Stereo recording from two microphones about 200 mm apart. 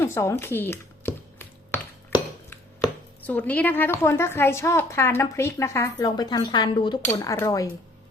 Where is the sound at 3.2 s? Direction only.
10° left (ahead or behind).